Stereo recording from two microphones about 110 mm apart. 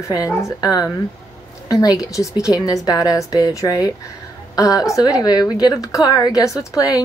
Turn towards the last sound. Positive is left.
turn(degrees=30)  # may be behind; listen again after turning